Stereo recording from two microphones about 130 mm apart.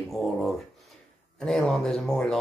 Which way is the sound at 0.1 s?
Centre (ahead or behind).